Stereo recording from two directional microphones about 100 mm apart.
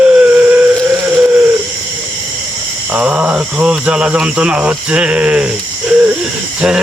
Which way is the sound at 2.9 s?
10° right (ahead or behind).